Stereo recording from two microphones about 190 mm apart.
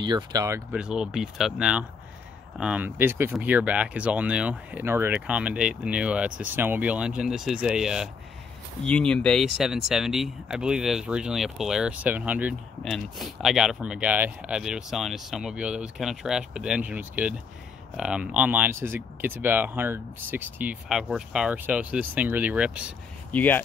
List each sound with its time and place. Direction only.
0.0 s speech: 20° right (ahead or behind)
0.7 s speech: 5° right (ahead or behind)
23.3 s speech: 10° left (ahead or behind)